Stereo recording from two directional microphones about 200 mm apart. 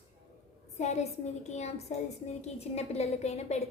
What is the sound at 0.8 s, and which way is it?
A woman's voice, 35° left (ahead or behind).